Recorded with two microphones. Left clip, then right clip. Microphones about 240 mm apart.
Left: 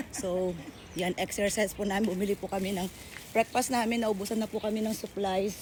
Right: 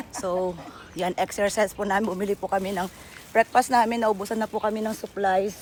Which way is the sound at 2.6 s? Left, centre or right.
Right.